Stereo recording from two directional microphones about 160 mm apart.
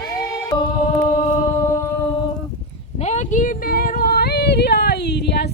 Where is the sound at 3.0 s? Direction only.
45° left (ahead or behind).